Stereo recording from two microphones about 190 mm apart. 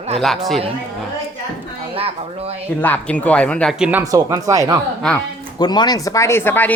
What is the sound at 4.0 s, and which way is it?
Speech, 15° right (ahead or behind).